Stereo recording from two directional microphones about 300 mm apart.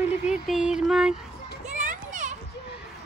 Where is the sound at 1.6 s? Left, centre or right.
Right.